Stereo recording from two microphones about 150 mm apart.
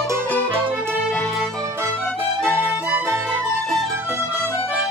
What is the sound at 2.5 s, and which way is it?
Music, 10° right (ahead or behind).